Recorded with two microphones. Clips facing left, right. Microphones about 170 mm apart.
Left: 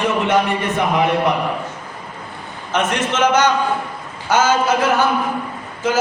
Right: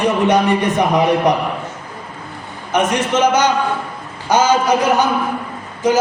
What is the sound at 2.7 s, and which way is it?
A man's voice, 10° right (ahead or behind).